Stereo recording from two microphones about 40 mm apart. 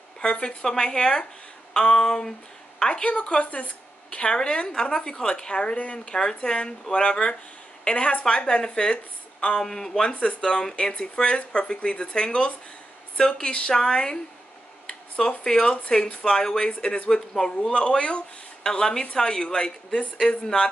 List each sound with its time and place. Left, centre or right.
0.2 s speech: left
2.8 s speech: left
6.0 s speech: centre